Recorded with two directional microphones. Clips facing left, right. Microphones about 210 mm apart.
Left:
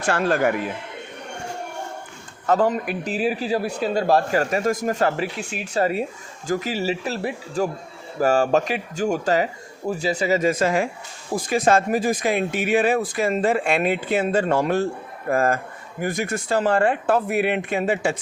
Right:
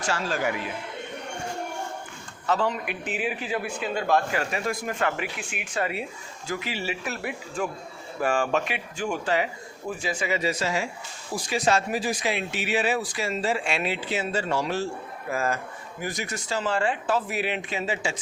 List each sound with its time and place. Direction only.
0.0 s speech: 55° left (ahead or behind)
2.5 s a man's voice: 50° left (ahead or behind)